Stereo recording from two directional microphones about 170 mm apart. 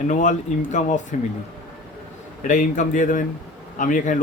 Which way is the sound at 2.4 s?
50° left (ahead or behind).